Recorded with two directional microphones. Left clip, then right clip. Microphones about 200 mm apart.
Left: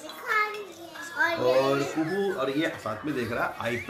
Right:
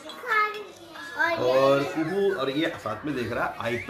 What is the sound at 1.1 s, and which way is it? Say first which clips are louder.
Children playing: right 1 dB; centre (ahead or behind).